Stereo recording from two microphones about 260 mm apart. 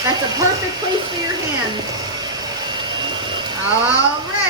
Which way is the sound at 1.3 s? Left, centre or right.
Centre.